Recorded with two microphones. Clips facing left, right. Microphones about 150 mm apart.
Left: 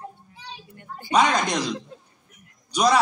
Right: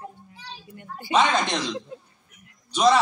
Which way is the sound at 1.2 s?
5° left (ahead or behind).